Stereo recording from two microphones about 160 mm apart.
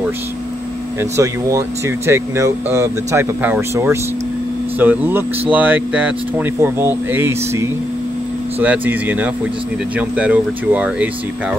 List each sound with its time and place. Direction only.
1.1 s speech: 20° right (ahead or behind)